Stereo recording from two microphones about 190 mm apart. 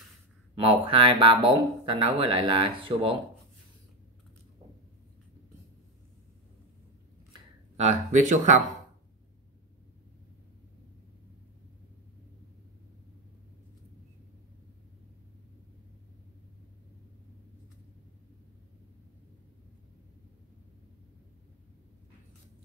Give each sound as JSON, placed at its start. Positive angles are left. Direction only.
{"t": 0.6, "sound": "speech", "side_deg": -30}
{"t": 7.7, "sound": "speech", "side_deg": -40}